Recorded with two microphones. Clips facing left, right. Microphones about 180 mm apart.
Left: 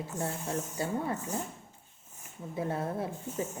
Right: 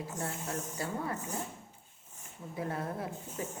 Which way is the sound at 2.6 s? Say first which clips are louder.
Left 4 dB; 25° left (ahead or behind).